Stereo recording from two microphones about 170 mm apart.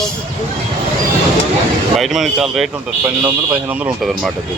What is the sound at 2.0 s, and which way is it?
Speech, centre (ahead or behind).